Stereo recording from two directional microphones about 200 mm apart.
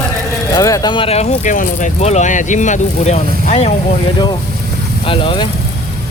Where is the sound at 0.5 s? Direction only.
20° left (ahead or behind); by 3.7 s 35° left (ahead or behind).